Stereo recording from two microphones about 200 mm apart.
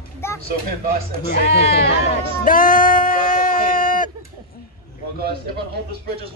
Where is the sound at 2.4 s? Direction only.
45° left (ahead or behind).